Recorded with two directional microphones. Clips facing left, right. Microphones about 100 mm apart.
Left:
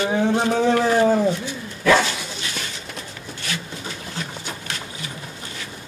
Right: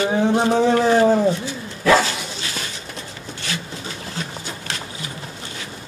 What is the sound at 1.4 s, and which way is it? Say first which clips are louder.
Dog: right 1 dB; 30° right (ahead or behind).